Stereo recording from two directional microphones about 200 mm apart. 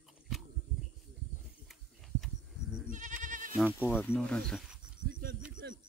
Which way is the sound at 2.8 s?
40° right (ahead or behind).